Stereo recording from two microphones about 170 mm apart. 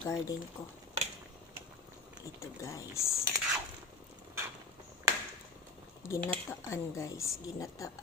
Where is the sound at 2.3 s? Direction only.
15° left (ahead or behind).